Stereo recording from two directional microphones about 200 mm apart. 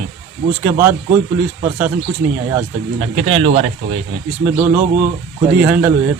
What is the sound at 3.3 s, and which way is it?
Speech, 30° right (ahead or behind).